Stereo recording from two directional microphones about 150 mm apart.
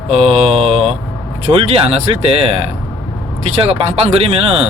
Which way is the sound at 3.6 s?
40° right (ahead or behind).